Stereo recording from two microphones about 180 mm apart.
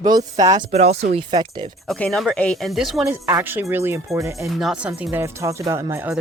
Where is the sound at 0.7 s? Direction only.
35° right (ahead or behind).